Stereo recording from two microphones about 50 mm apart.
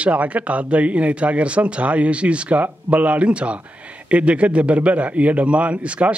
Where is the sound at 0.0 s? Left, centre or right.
Right.